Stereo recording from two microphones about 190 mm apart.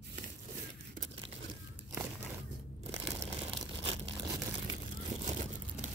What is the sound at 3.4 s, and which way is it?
Tearing, 30° right (ahead or behind).